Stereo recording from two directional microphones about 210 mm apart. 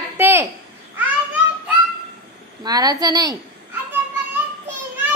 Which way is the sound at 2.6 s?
20° right (ahead or behind).